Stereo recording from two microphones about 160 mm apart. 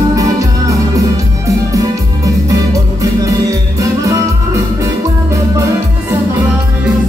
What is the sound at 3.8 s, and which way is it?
Music, 20° right (ahead or behind).